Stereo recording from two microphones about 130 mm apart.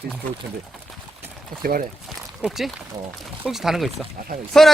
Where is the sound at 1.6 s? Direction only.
90° right.